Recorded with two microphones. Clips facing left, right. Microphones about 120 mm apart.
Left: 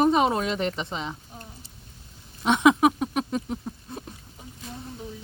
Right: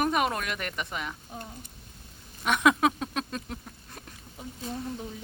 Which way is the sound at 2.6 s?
15° left (ahead or behind).